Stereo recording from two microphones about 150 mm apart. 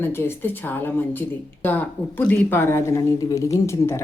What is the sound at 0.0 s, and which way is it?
Speech, 15° left (ahead or behind).